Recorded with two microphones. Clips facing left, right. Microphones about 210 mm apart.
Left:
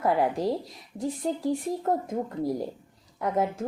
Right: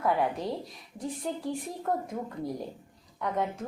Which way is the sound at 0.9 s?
25° left (ahead or behind).